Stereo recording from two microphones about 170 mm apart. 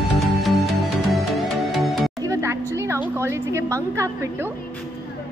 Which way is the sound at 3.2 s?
15° right (ahead or behind).